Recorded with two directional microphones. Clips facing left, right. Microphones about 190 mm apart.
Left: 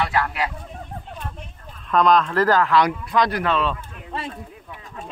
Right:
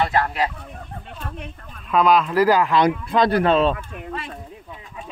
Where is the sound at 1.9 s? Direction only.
5° right (ahead or behind); by 3.7 s 30° right (ahead or behind).